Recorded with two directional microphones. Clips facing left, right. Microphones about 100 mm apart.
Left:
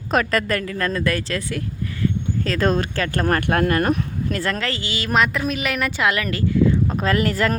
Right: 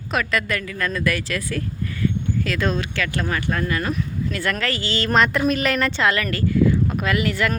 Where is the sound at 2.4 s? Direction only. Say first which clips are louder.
Left 4 dB; 35° left (ahead or behind).